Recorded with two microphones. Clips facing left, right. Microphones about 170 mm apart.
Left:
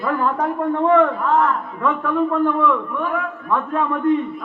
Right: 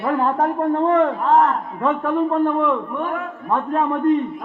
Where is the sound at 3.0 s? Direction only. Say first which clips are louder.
Left 1 dB; 40° right (ahead or behind).